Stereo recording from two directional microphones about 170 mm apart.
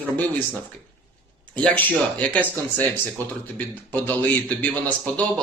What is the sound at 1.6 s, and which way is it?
A man's voice, 10° left (ahead or behind).